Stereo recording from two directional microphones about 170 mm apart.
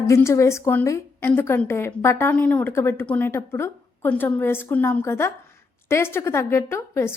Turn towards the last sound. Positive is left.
turn(degrees=15)  # may be behind; listen again after turning